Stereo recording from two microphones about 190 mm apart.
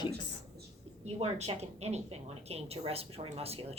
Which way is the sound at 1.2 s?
35° right (ahead or behind).